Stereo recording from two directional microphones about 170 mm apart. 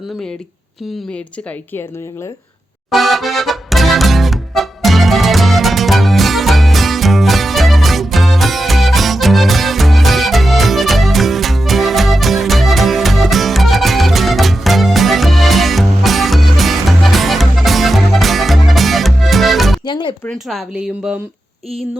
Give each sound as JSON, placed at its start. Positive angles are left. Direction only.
{"t": 2.9, "sound": "accordion", "side_deg": 0}
{"t": 19.8, "sound": "music", "side_deg": 30}
{"t": 20.2, "sound": "speech", "side_deg": 5}